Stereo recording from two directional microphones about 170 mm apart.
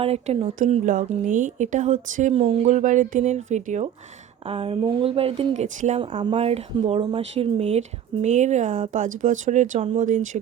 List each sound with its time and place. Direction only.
0.0 s speech: 35° right (ahead or behind)
4.4 s speech: 35° right (ahead or behind)
6.0 s speech: 30° right (ahead or behind); by 10.2 s 45° right (ahead or behind)